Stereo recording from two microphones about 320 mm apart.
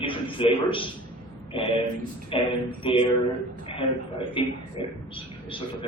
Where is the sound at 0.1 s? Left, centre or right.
Centre.